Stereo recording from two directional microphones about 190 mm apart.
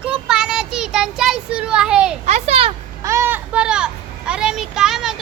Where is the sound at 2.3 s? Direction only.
35° right (ahead or behind).